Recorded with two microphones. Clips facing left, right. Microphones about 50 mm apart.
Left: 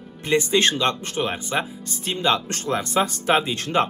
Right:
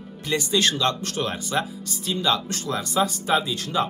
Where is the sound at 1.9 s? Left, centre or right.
Left.